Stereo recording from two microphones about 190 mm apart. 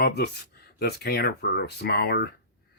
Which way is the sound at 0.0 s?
60° left (ahead or behind).